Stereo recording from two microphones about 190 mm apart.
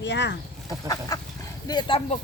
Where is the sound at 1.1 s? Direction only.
20° left (ahead or behind).